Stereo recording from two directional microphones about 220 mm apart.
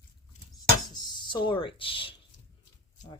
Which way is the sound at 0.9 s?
20° left (ahead or behind).